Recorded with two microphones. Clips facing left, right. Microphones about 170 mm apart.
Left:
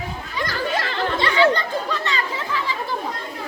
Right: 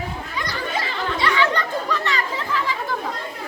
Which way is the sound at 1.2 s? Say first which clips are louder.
Left 3 dB; 30° left (ahead or behind).